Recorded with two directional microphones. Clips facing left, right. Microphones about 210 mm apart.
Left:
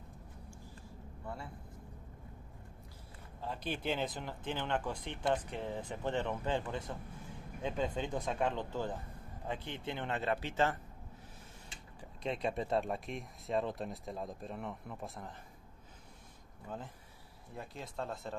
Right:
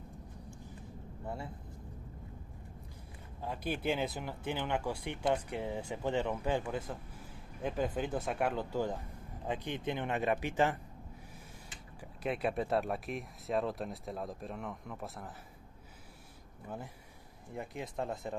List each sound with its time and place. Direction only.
1.2 s speech: 25° right (ahead or behind)
3.3 s speech: 10° right (ahead or behind)
12.0 s speech: 5° right (ahead or behind)
16.6 s speech: 10° right (ahead or behind)
17.9 s speech: 15° right (ahead or behind)